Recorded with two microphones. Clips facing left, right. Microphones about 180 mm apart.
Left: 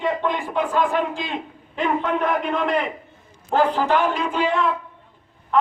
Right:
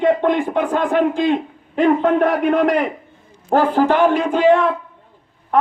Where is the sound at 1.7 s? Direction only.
55° right (ahead or behind).